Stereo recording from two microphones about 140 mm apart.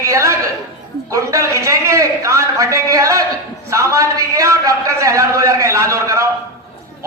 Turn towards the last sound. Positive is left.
turn(degrees=-20)  # may be behind; listen again after turning